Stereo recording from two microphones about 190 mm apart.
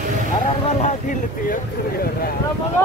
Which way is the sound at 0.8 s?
45° left (ahead or behind).